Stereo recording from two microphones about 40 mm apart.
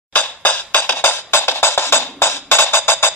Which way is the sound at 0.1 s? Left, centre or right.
Left.